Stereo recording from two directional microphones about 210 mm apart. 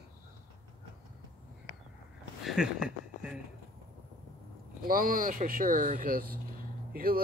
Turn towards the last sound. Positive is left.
turn(degrees=-45)  # may be behind; listen again after turning